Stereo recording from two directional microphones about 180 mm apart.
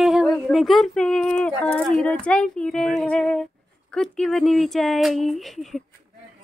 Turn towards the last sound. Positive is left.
turn(degrees=0)  # may be behind; listen again after turning